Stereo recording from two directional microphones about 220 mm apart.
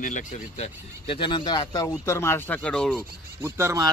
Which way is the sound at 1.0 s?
20° left (ahead or behind).